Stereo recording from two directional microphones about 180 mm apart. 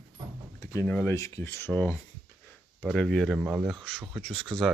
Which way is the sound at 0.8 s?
10° left (ahead or behind).